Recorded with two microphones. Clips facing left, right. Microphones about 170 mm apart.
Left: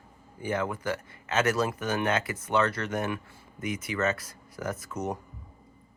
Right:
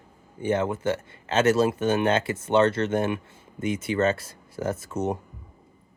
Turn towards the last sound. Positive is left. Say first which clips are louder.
# right 5 dB
turn(degrees=-25)  # may be behind; listen again after turning